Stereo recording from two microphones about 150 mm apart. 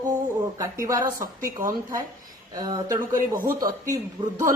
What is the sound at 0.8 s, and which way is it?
Speech, 20° right (ahead or behind).